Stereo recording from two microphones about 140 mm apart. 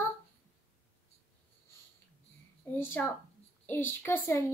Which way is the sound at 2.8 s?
15° left (ahead or behind).